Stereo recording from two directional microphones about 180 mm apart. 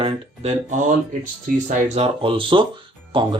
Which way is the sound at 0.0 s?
40° right (ahead or behind).